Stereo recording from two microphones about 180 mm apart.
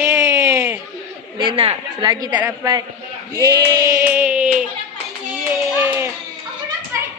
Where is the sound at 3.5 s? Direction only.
20° right (ahead or behind).